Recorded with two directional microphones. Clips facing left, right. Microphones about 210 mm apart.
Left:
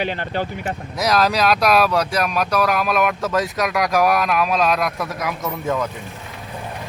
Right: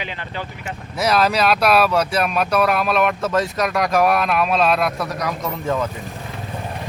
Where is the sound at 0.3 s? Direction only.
45° left (ahead or behind).